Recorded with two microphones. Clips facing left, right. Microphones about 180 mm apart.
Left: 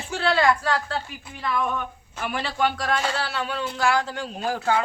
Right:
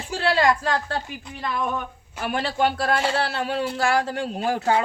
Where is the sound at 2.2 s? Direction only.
40° right (ahead or behind).